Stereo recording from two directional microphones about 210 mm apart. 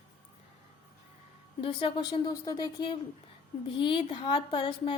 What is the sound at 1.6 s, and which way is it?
A woman's voice, 20° left (ahead or behind).